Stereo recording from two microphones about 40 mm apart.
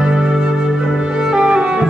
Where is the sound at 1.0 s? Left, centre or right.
Centre.